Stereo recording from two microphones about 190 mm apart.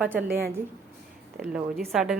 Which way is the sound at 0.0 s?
10° right (ahead or behind).